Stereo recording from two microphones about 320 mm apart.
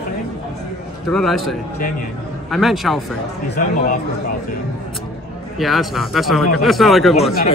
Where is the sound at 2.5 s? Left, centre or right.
Centre.